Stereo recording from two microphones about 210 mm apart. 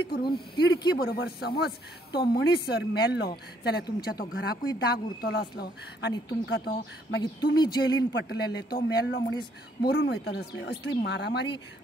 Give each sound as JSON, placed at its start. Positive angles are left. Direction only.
{"t": 0.1, "sound": "speech", "side_deg": 50}
{"t": 7.5, "sound": "speech", "side_deg": 20}
{"t": 8.1, "sound": "speech", "side_deg": 55}